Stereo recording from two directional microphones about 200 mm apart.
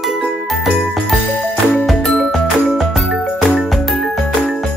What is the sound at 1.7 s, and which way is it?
Music, 5° left (ahead or behind).